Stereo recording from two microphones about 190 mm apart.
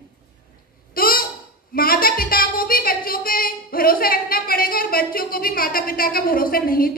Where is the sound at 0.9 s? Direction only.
50° left (ahead or behind).